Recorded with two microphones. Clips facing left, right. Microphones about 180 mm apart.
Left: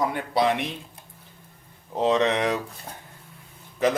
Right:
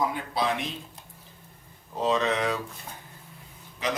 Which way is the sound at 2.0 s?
65° left (ahead or behind).